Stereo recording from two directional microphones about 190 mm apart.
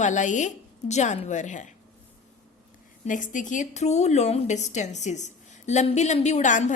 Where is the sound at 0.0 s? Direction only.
40° left (ahead or behind).